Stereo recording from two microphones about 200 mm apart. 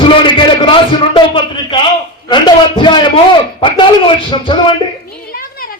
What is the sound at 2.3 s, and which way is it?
Speech, 25° left (ahead or behind).